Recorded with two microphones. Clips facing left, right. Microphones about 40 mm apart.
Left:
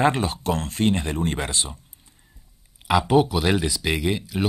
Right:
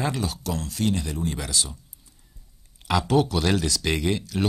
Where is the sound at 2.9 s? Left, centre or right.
Centre.